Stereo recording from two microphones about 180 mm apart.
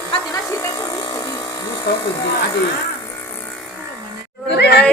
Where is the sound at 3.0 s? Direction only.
15° left (ahead or behind).